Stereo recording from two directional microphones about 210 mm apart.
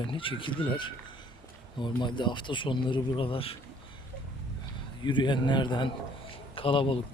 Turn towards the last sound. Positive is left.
turn(degrees=25)  # may be behind; listen again after turning